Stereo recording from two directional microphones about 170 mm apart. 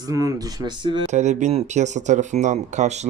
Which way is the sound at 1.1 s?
45° right (ahead or behind).